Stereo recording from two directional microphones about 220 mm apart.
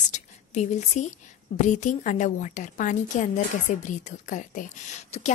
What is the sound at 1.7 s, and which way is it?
A woman's voice, 35° left (ahead or behind).